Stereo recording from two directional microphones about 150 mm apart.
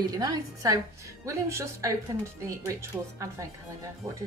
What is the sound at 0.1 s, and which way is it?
A woman's voice, 25° right (ahead or behind).